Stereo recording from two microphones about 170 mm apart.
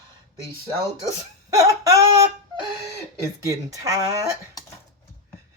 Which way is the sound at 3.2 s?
20° right (ahead or behind).